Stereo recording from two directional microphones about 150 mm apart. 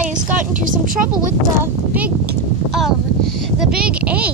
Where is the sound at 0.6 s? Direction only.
65° right (ahead or behind).